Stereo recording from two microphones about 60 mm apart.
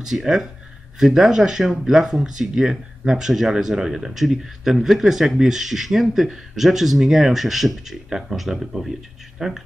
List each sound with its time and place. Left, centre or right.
0.0 s speech: centre